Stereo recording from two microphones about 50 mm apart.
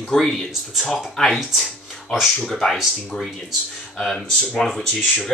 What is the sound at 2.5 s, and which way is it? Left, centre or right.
Speech, centre.